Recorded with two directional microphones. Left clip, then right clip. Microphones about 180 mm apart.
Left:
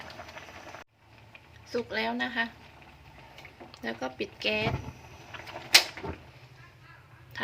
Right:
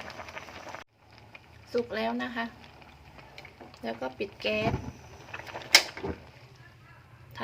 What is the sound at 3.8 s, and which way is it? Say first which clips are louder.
Speech: even; centre (ahead or behind).